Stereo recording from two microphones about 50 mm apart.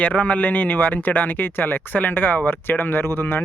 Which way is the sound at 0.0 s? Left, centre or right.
Left.